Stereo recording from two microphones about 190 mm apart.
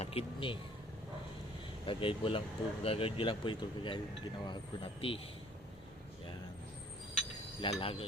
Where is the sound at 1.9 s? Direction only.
25° left (ahead or behind).